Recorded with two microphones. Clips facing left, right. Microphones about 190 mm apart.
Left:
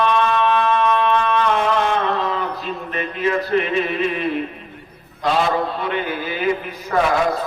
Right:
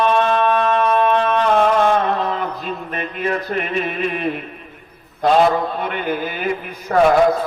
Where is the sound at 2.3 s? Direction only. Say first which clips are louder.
Right 1 dB; 45° right (ahead or behind).